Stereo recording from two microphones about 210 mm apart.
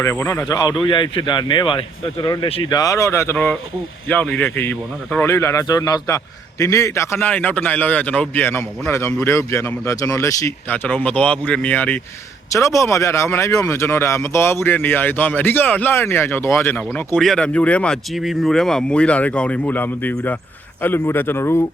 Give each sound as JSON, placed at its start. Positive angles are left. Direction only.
{"t": 0.0, "sound": "speech", "side_deg": 15}